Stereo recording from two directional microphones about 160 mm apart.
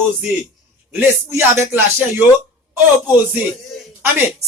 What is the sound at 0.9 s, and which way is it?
Speech, 15° right (ahead or behind).